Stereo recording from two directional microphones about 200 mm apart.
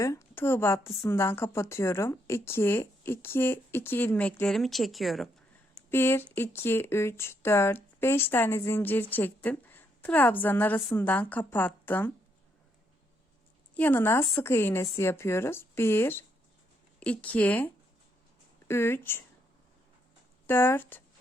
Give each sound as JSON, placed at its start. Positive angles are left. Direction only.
{"t": 0.0, "sound": "speech", "side_deg": 15}
{"t": 5.9, "sound": "a woman's voice", "side_deg": 10}
{"t": 13.7, "sound": "speech", "side_deg": 10}
{"t": 18.7, "sound": "speech", "side_deg": 10}
{"t": 20.5, "sound": "speech", "side_deg": 10}